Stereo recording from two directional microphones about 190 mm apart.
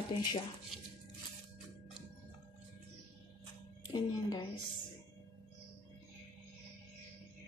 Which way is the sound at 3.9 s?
25° left (ahead or behind).